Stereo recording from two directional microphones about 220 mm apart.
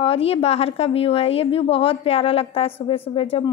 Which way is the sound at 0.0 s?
25° left (ahead or behind).